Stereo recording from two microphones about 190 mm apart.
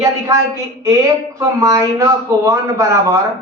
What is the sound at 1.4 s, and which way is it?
Speech, 15° right (ahead or behind).